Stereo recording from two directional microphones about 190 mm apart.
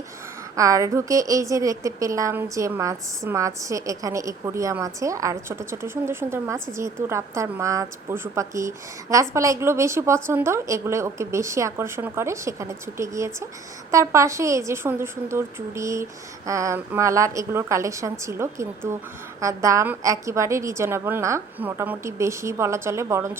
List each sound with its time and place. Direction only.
0.5 s a woman's voice: 15° right (ahead or behind)